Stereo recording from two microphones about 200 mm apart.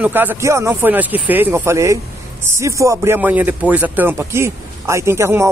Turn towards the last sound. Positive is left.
turn(degrees=-15)  # may be behind; listen again after turning